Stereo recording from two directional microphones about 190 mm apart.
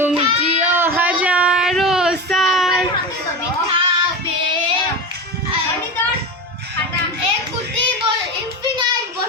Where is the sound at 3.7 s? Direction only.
25° right (ahead or behind).